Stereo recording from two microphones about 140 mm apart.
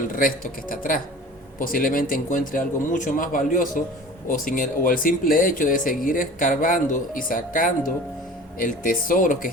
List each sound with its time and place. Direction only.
0.2 s speech: 80° left